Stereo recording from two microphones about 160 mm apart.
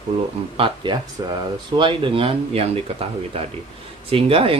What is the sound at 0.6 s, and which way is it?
Speech, 35° right (ahead or behind).